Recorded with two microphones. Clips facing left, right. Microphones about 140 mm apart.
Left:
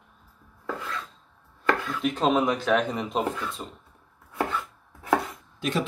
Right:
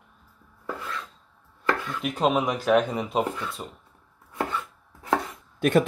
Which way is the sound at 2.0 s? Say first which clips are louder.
Even; 5° right (ahead or behind).